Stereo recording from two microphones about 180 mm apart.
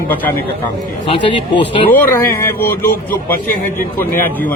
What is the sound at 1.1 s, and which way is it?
Speech, 30° left (ahead or behind).